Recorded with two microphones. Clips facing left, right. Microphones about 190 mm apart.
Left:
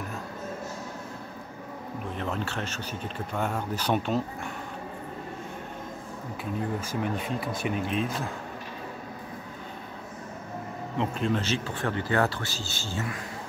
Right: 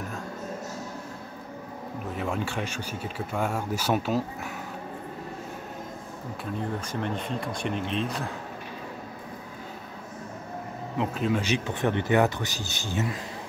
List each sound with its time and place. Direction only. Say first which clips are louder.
2.1 s speech: right 3 dB; 10° right (ahead or behind)
6.4 s speech: left 1 dB; 5° left (ahead or behind)
11.0 s speech: right 1 dB; 5° right (ahead or behind); by 13.2 s 20° right (ahead or behind)